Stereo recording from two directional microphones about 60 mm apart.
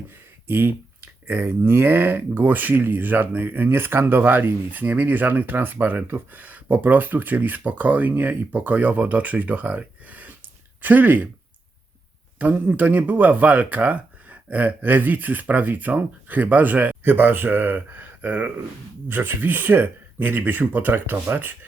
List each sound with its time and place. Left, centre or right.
0.4 s a sound: right
1.5 s speech: right
12.4 s speech: right